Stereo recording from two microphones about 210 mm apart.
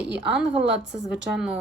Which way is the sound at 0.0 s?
55° right (ahead or behind).